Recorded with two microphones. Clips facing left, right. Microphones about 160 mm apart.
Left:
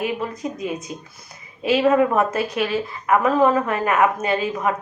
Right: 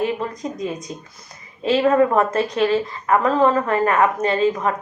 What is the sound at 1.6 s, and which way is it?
A woman's voice, 10° left (ahead or behind).